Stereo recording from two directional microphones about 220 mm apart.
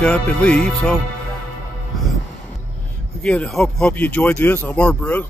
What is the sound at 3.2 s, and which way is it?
Speech, 5° left (ahead or behind).